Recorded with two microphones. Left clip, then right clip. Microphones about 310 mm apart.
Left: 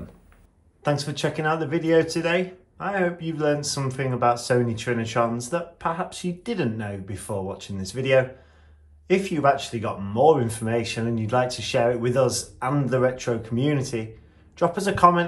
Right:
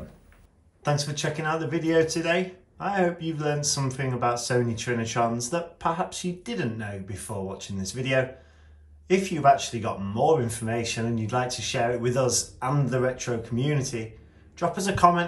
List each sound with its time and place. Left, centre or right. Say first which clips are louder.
0.8 s speech: left 2 dB; centre